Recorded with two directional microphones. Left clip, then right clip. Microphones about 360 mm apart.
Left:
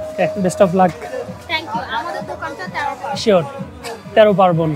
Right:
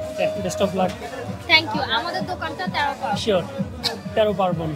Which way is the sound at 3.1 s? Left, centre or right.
Left.